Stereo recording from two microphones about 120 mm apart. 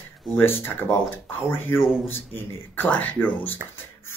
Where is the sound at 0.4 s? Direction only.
20° left (ahead or behind).